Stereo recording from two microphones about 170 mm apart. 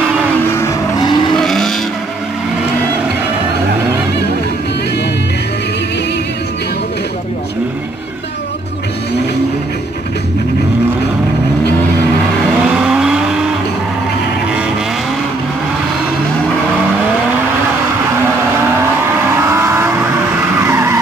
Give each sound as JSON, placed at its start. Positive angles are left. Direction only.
{"t": 0.5, "sound": "vehicle", "side_deg": 15}
{"t": 1.3, "sound": "vehicle", "side_deg": 5}
{"t": 12.8, "sound": "vehicle", "side_deg": -5}
{"t": 19.4, "sound": "vehicle", "side_deg": -15}